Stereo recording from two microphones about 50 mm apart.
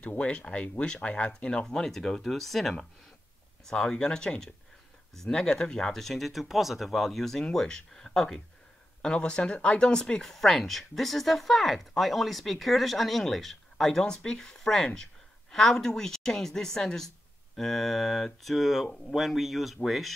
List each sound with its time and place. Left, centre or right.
0.0 s speech: left
9.0 s speech: left; by 20.2 s centre